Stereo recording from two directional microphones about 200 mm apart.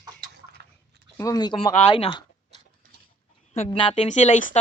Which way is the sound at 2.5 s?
35° right (ahead or behind).